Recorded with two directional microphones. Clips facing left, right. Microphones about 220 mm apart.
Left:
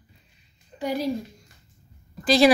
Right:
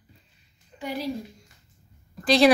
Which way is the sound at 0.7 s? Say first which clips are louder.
Left 6 dB; 40° left (ahead or behind).